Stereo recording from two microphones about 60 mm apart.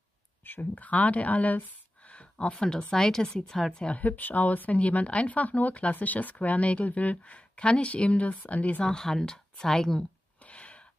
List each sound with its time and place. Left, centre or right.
0.4 s speech: left
2.5 s a woman's voice: centre; by 8.8 s left
8.8 s a woman's voice: centre
10.4 s gasp: left